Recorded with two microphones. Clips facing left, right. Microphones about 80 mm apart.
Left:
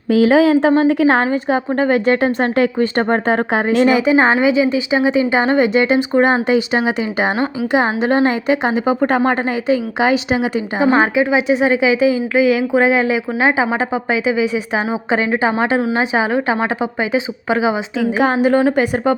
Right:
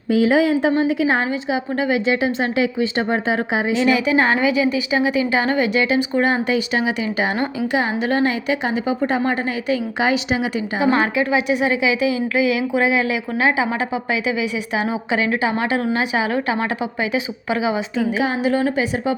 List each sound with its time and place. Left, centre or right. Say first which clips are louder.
0.1 s speech: left 4 dB; left
0.8 s a woman's voice: left 5 dB; left
1.3 s speech: left 5 dB; left
3.9 s speech: left 4 dB; left
9.0 s a woman's voice: left 5 dB; left
9.6 s speech: left 4 dB; left
10.8 s a woman's voice: left 4 dB; left
18.2 s speech: left 8 dB; left